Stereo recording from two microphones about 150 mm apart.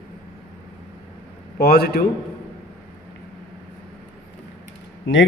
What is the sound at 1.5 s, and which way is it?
Speech, 90° left.